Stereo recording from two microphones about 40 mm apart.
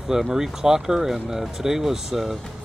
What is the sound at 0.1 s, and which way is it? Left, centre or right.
Speech, centre.